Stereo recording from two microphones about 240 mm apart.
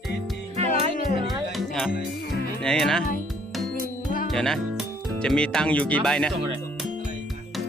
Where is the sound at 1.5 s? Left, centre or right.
Centre.